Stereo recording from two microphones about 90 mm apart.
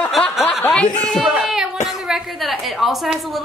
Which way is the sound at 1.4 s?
5° right (ahead or behind).